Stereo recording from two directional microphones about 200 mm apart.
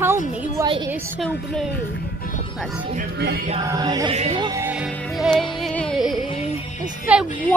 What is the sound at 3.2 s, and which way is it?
Music, 55° right (ahead or behind).